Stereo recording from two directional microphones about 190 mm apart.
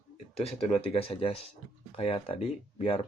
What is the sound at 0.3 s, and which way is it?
Speech, 30° left (ahead or behind).